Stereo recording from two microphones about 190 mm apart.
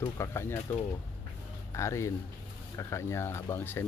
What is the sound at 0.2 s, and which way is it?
Speech, 15° left (ahead or behind).